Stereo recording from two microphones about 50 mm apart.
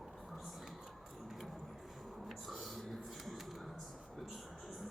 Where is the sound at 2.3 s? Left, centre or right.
Centre.